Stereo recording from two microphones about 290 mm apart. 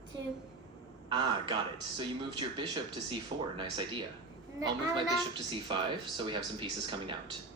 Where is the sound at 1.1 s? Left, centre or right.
Centre.